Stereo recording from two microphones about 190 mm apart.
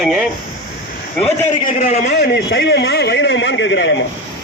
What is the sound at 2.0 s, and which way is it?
A man's voice, 60° left (ahead or behind).